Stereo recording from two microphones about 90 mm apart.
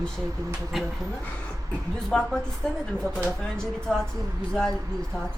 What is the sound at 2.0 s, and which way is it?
Speech, 10° left (ahead or behind).